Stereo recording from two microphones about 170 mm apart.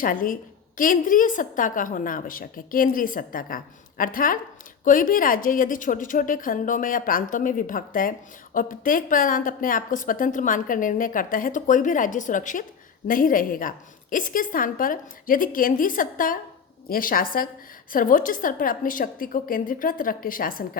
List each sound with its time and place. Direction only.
0.0 s a woman's voice: 55° left (ahead or behind)